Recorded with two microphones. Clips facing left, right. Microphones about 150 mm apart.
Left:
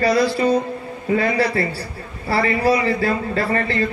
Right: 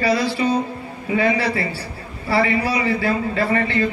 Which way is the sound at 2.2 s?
40° left (ahead or behind).